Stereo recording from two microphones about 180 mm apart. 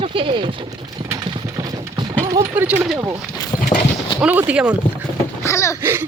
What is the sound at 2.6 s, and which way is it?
Speech, 10° right (ahead or behind).